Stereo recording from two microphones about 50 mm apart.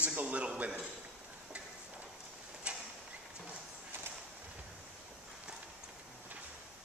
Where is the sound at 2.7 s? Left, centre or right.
Right.